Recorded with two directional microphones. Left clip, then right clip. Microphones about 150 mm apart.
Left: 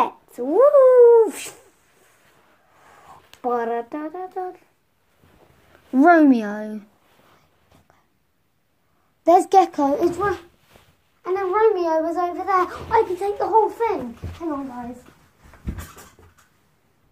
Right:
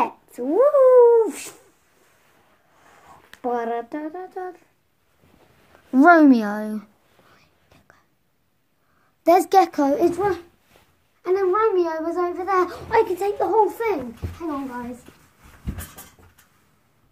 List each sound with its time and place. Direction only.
0.0 s a sound: 10° left (ahead or behind)
2.8 s speech: 20° left (ahead or behind)
5.9 s a child's voice: 20° right (ahead or behind)
9.2 s a child's voice: 20° right (ahead or behind)
11.2 s a child's voice: centre (ahead or behind)
12.5 s a child's voice: 5° right (ahead or behind)